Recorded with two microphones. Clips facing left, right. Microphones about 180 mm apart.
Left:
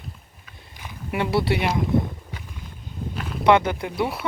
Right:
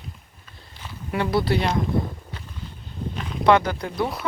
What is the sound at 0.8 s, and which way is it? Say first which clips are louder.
Speech: even; 20° left (ahead or behind).